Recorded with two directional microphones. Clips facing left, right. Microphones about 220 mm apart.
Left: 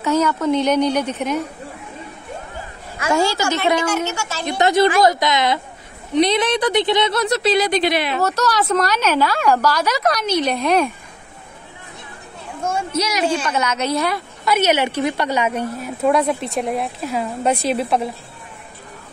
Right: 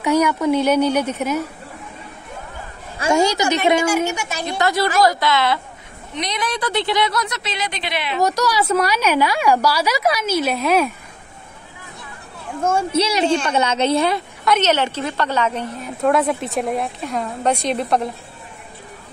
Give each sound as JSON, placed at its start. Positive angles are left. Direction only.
{"t": 0.0, "sound": "a woman's voice", "side_deg": -15}
{"t": 3.0, "sound": "a woman's voice", "side_deg": -25}
{"t": 4.5, "sound": "a woman's voice", "side_deg": 20}
{"t": 6.1, "sound": "a woman's voice", "side_deg": 30}
{"t": 8.2, "sound": "a woman's voice", "side_deg": -10}
{"t": 12.9, "sound": "a woman's voice", "side_deg": -30}
{"t": 14.4, "sound": "a woman's voice", "side_deg": 10}